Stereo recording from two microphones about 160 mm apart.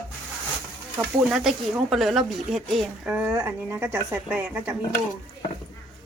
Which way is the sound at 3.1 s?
10° right (ahead or behind).